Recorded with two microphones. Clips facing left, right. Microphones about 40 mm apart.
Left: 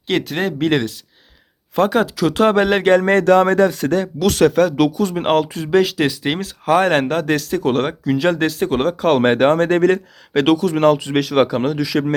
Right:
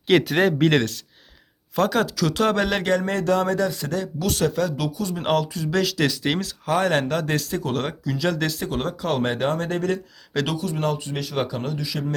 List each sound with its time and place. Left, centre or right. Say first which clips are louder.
0.1 s speech: right 2 dB; centre
1.7 s speech: left 5 dB; left
3.1 s speech: left 9 dB; left
4.2 s speech: left 9 dB; left
5.2 s speech: left 3 dB; left
5.7 s speech: left 7 dB; left
6.7 s speech: left 6 dB; left
10.6 s speech: left 11 dB; left